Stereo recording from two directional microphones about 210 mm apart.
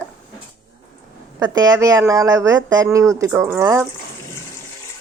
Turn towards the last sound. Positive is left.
turn(degrees=-10)  # may be behind; listen again after turning